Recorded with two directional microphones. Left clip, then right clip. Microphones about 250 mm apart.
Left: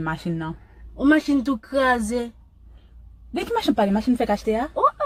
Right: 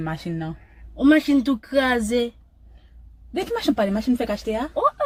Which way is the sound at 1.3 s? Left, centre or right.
Right.